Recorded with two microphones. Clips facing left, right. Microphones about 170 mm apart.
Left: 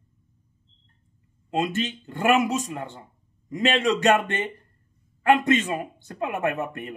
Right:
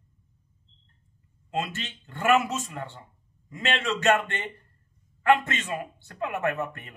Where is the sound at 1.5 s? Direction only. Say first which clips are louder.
Left 6 dB; 20° left (ahead or behind).